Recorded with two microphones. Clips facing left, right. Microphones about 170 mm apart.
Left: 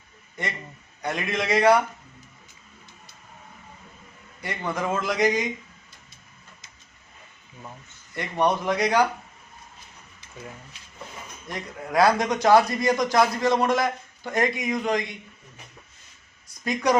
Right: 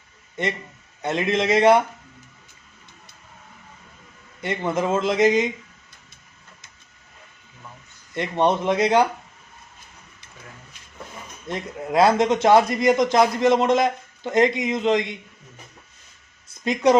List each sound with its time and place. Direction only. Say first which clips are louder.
0.4 s a man's voice: right 6 dB; 20° right (ahead or behind)
4.4 s a man's voice: right 5 dB; 25° right (ahead or behind)
8.1 s a man's voice: right 3 dB; 25° right (ahead or behind)
11.4 s a man's voice: right 6 dB; 20° right (ahead or behind)
16.6 s a man's voice: right 5 dB; 20° right (ahead or behind)